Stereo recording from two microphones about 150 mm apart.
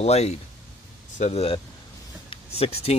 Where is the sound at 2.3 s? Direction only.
40° left (ahead or behind).